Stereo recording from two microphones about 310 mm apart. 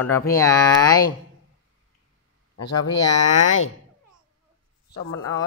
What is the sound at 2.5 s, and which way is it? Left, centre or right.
Speech, left.